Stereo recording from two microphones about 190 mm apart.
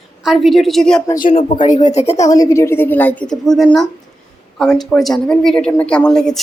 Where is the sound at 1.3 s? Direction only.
30° left (ahead or behind).